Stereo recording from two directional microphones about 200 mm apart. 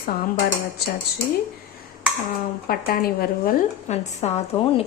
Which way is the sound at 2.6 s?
45° left (ahead or behind).